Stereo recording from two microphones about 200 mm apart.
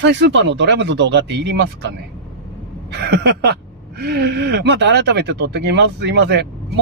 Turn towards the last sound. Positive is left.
turn(degrees=-60)  # may be behind; listen again after turning